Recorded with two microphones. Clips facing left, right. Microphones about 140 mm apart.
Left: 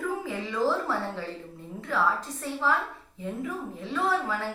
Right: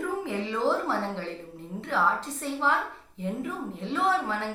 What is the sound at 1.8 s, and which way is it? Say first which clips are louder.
Speech: even; 25° right (ahead or behind).